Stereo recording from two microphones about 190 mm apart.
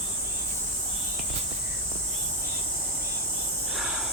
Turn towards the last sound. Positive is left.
turn(degrees=0)  # may be behind; listen again after turning